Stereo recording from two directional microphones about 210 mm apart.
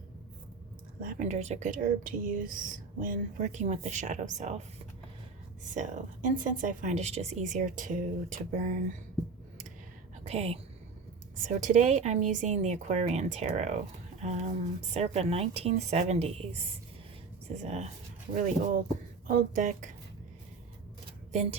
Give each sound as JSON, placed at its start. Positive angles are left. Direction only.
{"t": 0.9, "sound": "speech", "side_deg": -40}
{"t": 5.6, "sound": "speech", "side_deg": -35}
{"t": 10.2, "sound": "speech", "side_deg": -30}
{"t": 19.3, "sound": "speech", "side_deg": -40}